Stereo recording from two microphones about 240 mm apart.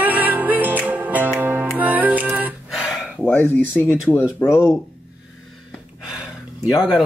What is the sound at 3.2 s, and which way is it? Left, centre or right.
Speech, centre.